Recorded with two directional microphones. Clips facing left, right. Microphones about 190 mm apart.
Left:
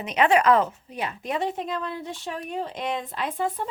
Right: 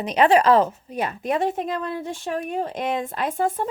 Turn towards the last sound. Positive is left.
turn(degrees=-50)  # may be behind; listen again after turning